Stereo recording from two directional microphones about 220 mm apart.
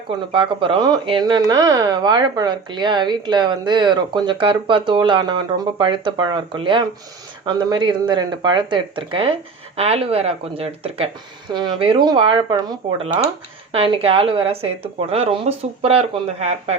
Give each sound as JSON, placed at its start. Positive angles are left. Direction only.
{"t": 0.3, "sound": "speech", "side_deg": -25}